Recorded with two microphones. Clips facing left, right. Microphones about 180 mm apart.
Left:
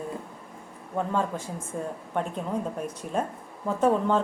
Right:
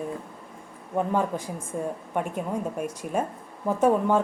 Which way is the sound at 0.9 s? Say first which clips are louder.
Right 2 dB; 15° right (ahead or behind).